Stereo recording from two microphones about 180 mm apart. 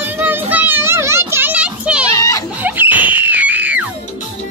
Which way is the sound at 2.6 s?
10° right (ahead or behind).